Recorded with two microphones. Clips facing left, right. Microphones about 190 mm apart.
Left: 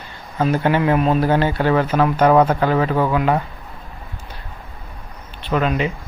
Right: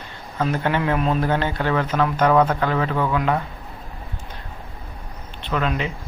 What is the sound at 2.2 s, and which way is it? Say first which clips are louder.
Speech: left 3 dB; 30° left (ahead or behind).